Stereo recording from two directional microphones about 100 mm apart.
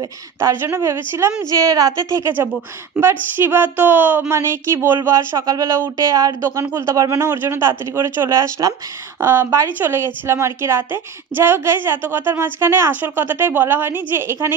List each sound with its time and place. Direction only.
0.4 s a woman's voice: 25° right (ahead or behind)
1.5 s a woman's voice: 35° right (ahead or behind)
6.6 s a woman's voice: 20° right (ahead or behind)